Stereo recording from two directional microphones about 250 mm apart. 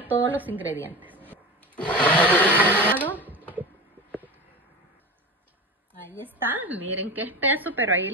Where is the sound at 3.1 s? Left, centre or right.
Centre.